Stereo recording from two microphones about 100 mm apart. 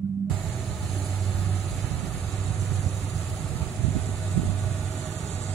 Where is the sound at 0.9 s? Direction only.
15° left (ahead or behind).